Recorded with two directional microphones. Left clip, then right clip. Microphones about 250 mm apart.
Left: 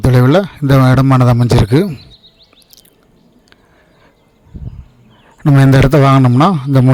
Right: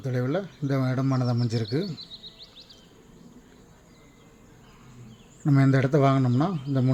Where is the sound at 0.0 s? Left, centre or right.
Left.